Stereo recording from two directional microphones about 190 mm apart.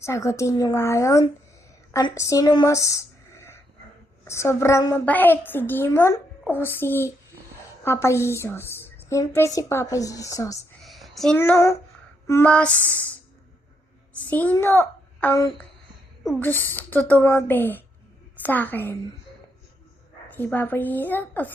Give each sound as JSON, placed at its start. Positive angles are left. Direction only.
{"t": 0.0, "sound": "a woman's voice", "side_deg": 15}
{"t": 10.8, "sound": "a woman's voice", "side_deg": 0}
{"t": 14.2, "sound": "a child's voice", "side_deg": 10}
{"t": 20.2, "sound": "a woman's voice", "side_deg": 10}